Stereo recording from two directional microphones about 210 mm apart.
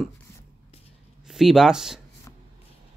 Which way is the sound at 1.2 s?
Centre (ahead or behind).